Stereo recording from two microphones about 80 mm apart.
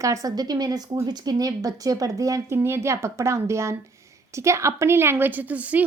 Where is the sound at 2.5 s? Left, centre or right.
Right.